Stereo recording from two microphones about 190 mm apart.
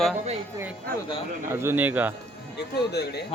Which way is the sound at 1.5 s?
10° right (ahead or behind).